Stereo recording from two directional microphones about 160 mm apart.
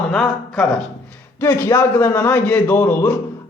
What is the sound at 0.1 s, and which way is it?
Speech, 5° left (ahead or behind).